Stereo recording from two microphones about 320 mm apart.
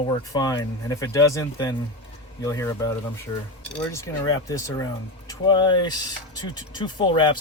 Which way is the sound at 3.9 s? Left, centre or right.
Centre.